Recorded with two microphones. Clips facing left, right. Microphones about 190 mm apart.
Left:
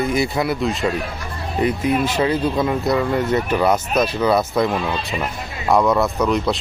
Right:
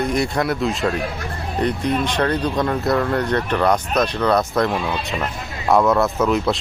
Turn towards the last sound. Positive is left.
turn(degrees=-5)  # may be behind; listen again after turning